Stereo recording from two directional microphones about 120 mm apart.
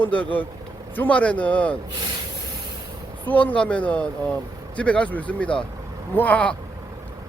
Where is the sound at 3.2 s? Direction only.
10° left (ahead or behind).